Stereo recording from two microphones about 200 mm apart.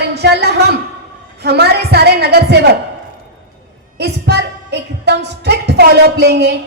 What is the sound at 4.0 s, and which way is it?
A woman's voice, 55° right (ahead or behind).